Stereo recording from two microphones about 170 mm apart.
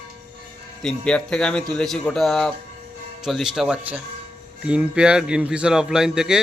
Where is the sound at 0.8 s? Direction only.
5° left (ahead or behind).